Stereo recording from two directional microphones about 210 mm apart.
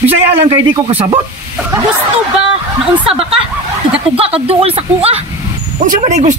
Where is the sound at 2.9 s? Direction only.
25° right (ahead or behind).